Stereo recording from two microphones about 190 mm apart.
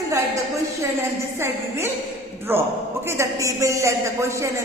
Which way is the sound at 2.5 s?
10° right (ahead or behind).